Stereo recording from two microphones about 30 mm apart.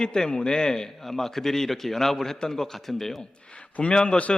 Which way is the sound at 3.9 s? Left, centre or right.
Left.